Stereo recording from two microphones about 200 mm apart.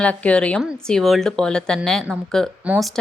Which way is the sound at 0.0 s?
5° left (ahead or behind).